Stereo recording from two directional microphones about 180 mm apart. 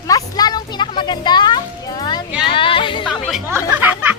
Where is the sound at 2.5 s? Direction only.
30° left (ahead or behind).